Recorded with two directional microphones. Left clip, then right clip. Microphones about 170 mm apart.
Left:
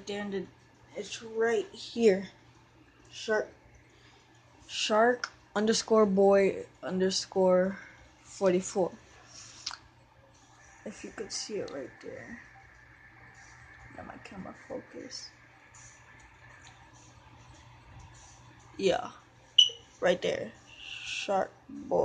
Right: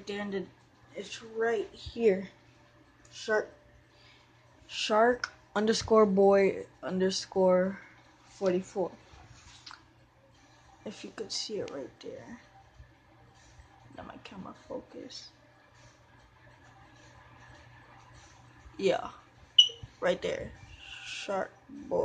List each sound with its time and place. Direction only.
0.0 s speech: centre (ahead or behind)
0.9 s speech: 10° left (ahead or behind)
1.4 s speech: 20° left (ahead or behind)
3.1 s a woman's voice: centre (ahead or behind)
4.6 s speech: centre (ahead or behind)
8.4 s a sound: 25° left (ahead or behind)
10.8 s speech: 5° left (ahead or behind)
13.9 s speech: centre (ahead or behind)
18.8 s speech: 5° left (ahead or behind)
20.0 s a sound: 10° left (ahead or behind)